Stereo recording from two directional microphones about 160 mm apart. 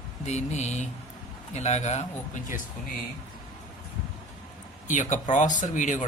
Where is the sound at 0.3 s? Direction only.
45° left (ahead or behind).